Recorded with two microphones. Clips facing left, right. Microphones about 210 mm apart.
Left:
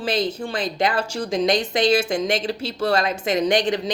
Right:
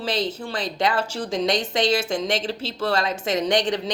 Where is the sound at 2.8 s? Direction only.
40° left (ahead or behind).